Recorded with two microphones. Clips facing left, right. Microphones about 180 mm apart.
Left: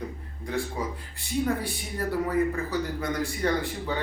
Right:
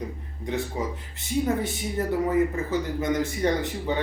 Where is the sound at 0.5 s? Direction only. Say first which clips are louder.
Right 2 dB; 20° right (ahead or behind).